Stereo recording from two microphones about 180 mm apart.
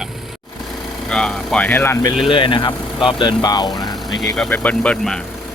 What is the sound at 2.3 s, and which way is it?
Speech, 25° left (ahead or behind).